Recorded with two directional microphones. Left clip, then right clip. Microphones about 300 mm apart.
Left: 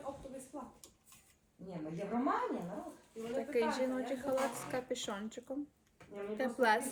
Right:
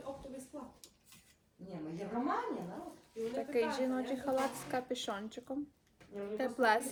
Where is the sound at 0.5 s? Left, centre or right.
Centre.